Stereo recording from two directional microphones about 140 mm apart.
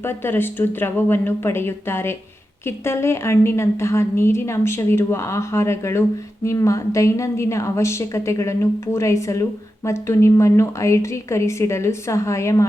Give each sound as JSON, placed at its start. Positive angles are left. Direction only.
{"t": 0.0, "sound": "a woman's voice", "side_deg": 15}